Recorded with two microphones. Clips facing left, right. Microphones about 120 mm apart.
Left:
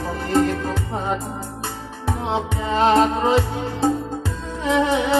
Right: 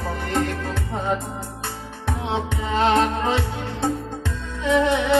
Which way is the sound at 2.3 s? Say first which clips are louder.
Left 2 dB; 35° left (ahead or behind).